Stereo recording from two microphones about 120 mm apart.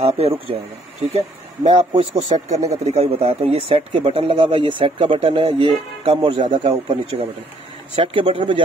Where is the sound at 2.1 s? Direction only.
70° right (ahead or behind).